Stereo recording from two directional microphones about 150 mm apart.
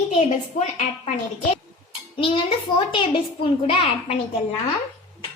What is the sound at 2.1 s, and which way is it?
A child's voice, 35° left (ahead or behind).